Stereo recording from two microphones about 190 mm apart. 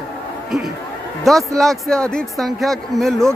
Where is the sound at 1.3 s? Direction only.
Centre (ahead or behind).